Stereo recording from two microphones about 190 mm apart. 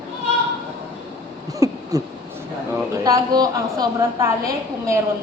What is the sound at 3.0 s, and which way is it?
A woman's voice, 20° right (ahead or behind).